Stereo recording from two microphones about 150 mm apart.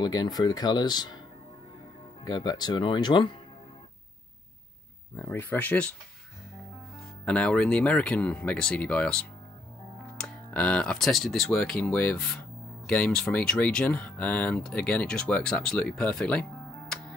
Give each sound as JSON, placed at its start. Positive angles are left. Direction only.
{"t": 0.0, "sound": "speech", "side_deg": 25}
{"t": 2.2, "sound": "speech", "side_deg": 30}
{"t": 5.1, "sound": "speech", "side_deg": 15}
{"t": 7.2, "sound": "speech", "side_deg": 5}